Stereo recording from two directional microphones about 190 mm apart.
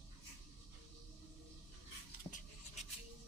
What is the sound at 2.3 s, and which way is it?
Scratch, 35° left (ahead or behind).